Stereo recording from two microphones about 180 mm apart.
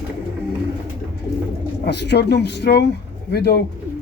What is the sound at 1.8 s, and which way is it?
Speech, 70° left (ahead or behind).